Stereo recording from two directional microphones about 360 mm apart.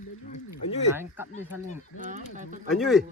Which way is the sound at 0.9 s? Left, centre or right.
Centre.